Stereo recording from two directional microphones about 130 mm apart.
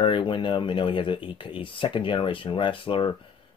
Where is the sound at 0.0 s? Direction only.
40° left (ahead or behind).